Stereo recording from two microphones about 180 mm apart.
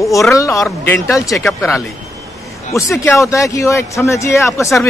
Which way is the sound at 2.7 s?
15° left (ahead or behind).